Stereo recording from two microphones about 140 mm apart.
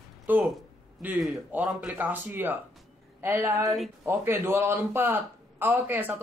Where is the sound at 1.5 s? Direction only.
5° right (ahead or behind).